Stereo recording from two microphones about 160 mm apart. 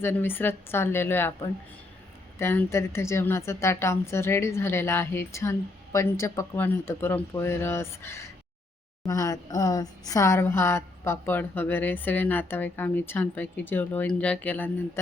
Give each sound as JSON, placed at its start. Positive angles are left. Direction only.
{"t": 0.0, "sound": "a woman's voice", "side_deg": 15}
{"t": 2.4, "sound": "a woman's voice", "side_deg": 15}